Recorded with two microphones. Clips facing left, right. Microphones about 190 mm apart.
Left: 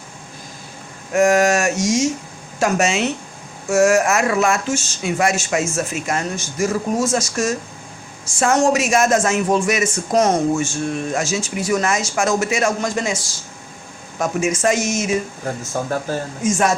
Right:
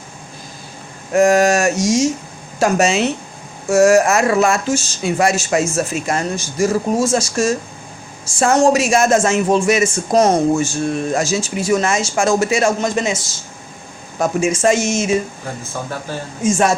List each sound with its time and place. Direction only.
1.1 s speech: 35° right (ahead or behind)
15.7 s speech: 45° left (ahead or behind)
16.4 s speech: 30° right (ahead or behind)